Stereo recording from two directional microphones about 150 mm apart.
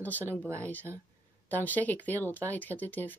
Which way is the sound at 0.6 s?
10° left (ahead or behind).